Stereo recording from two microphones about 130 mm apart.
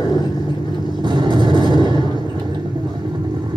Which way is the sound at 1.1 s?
35° right (ahead or behind).